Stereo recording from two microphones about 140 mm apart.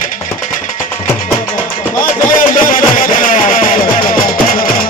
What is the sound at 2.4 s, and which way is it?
Music, 75° left (ahead or behind).